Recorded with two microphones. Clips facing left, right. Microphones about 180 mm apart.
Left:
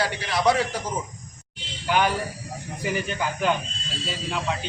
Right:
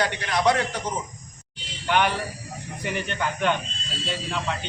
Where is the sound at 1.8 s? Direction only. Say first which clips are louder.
Even; 5° left (ahead or behind).